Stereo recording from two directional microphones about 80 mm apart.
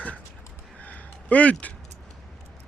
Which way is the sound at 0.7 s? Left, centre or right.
Centre.